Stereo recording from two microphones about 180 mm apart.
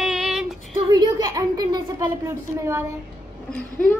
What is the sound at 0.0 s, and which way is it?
Female singing, 5° right (ahead or behind).